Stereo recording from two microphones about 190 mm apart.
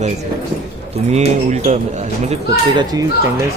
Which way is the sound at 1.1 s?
35° right (ahead or behind).